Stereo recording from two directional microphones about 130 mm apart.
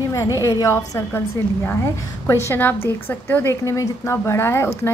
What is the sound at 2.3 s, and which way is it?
A woman's voice, 20° left (ahead or behind).